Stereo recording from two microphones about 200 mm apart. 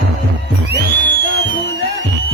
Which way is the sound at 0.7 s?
60° right (ahead or behind).